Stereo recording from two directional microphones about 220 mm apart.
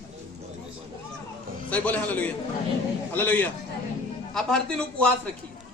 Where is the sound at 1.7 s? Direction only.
5° left (ahead or behind).